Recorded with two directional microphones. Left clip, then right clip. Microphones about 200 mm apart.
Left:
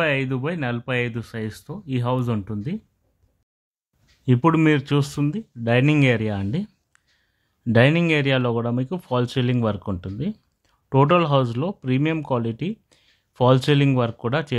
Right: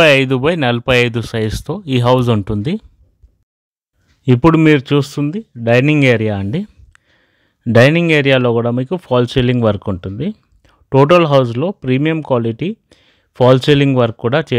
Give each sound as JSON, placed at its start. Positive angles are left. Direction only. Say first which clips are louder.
{"t": 0.0, "sound": "speech", "louder": "right 13 dB", "side_deg": -50}
{"t": 4.2, "sound": "speech", "louder": "right 8 dB", "side_deg": -30}